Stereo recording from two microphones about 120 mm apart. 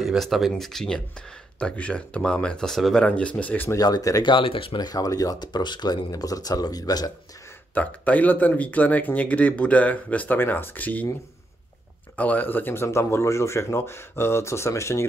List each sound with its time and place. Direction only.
0.0 s speech: centre (ahead or behind); by 3.7 s 15° left (ahead or behind)
3.7 s speech: 30° left (ahead or behind)
4.3 s speech: 45° left (ahead or behind)
4.7 s speech: 30° left (ahead or behind)
7.7 s speech: 10° left (ahead or behind)
12.2 s speech: 15° left (ahead or behind)